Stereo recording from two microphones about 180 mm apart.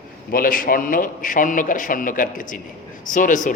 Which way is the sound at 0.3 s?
50° left (ahead or behind).